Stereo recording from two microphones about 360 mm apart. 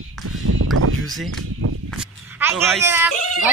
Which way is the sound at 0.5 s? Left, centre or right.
Right.